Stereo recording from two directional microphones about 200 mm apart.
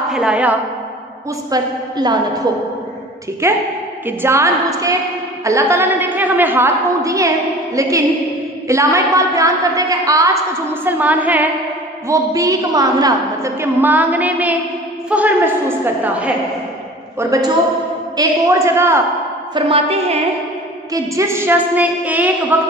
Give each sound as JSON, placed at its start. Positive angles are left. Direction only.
{"t": 0.1, "sound": "a woman's voice", "side_deg": -5}
{"t": 1.5, "sound": "a woman's voice", "side_deg": -20}
{"t": 3.4, "sound": "a woman's voice", "side_deg": -15}
{"t": 19.5, "sound": "a woman's voice", "side_deg": -25}
{"t": 20.9, "sound": "a woman's voice", "side_deg": -15}